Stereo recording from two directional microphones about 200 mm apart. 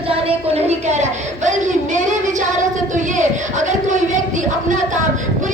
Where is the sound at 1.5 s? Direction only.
40° right (ahead or behind).